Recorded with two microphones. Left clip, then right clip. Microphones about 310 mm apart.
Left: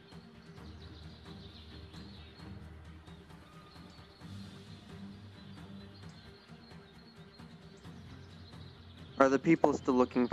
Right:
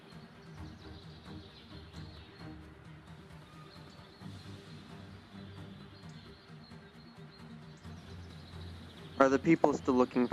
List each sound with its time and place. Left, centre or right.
9.1 s a man's voice: centre